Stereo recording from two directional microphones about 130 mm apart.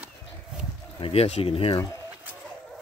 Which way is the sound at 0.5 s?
10° right (ahead or behind).